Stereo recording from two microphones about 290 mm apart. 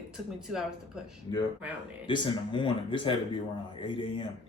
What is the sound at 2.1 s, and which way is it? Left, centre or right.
Speech, centre.